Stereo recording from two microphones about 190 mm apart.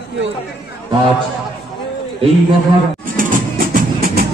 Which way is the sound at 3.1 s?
50° right (ahead or behind).